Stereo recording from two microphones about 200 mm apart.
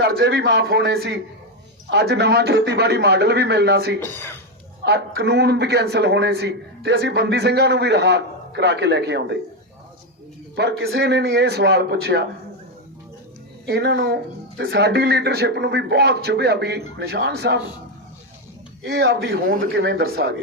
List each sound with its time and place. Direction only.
0.0 s speech: 55° right (ahead or behind)
4.0 s speech: 10° left (ahead or behind)
4.9 s speech: 55° right (ahead or behind)
10.5 s speech: 60° right (ahead or behind)
13.7 s speech: 55° right (ahead or behind)
18.9 s speech: 55° right (ahead or behind)